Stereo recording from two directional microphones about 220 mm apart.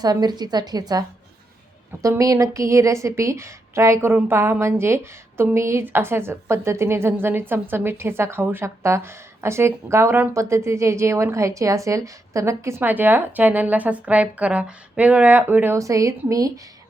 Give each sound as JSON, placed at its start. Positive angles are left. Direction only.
{"t": 0.0, "sound": "a woman's voice", "side_deg": -20}